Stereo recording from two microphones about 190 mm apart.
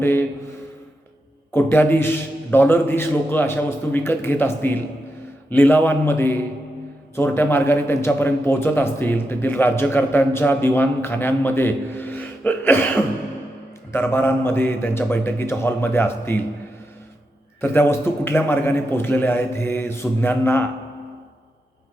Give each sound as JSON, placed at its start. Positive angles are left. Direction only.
{"t": 0.0, "sound": "a sound", "side_deg": 10}
{"t": 1.5, "sound": "a man's voice", "side_deg": 10}
{"t": 13.9, "sound": "a man's voice", "side_deg": 10}
{"t": 17.6, "sound": "a man's voice", "side_deg": 10}